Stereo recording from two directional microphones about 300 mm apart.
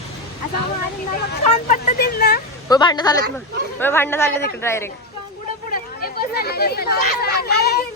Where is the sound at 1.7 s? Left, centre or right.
Left.